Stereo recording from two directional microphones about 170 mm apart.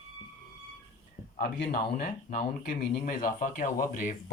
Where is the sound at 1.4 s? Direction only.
70° left (ahead or behind).